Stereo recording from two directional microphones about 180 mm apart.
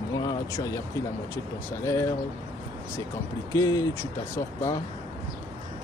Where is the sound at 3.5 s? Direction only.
20° left (ahead or behind).